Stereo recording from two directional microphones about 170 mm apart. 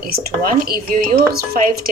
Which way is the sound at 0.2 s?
55° right (ahead or behind).